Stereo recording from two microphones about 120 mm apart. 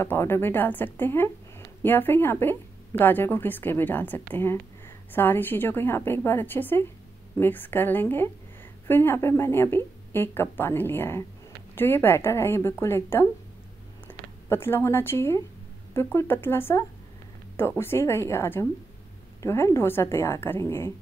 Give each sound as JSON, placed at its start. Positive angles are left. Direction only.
{"t": 0.0, "sound": "a woman's voice", "side_deg": 20}